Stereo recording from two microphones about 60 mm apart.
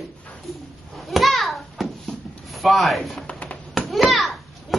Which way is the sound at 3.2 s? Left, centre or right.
Centre.